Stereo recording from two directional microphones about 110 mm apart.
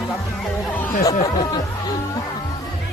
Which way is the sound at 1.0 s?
35° left (ahead or behind).